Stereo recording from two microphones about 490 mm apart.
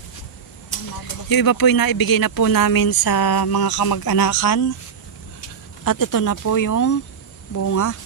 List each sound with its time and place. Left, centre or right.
1.3 s speech: left
5.9 s speech: left